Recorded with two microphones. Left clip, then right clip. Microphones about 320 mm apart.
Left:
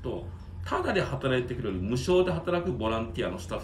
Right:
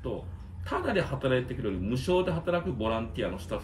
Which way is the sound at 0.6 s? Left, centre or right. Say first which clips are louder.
Left 1 dB; centre.